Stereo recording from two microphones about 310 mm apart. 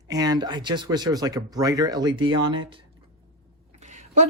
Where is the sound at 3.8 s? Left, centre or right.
Right.